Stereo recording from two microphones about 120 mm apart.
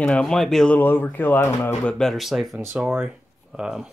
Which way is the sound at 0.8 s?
15° left (ahead or behind).